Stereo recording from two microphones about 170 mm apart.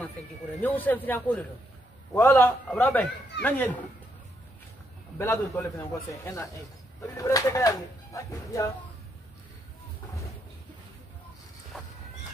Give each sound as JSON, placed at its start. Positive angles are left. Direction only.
{"t": 0.6, "sound": "a man's voice", "side_deg": 10}
{"t": 5.2, "sound": "a man's voice", "side_deg": 15}
{"t": 11.7, "sound": "a sound", "side_deg": 0}